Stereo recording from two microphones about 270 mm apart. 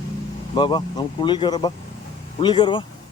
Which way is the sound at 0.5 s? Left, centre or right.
Centre.